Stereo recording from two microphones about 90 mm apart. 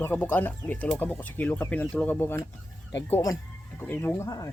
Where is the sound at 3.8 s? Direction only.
20° left (ahead or behind).